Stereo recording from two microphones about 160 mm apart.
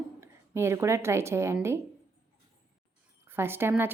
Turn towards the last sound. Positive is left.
turn(degrees=-15)  # may be behind; listen again after turning